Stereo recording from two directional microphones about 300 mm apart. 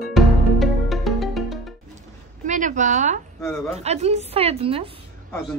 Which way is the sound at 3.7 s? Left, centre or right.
Right.